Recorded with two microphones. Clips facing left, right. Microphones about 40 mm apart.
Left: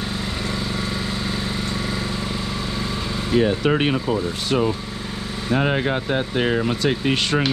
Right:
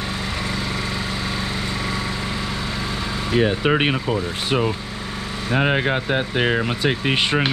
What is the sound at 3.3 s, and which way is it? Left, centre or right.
Speech, centre.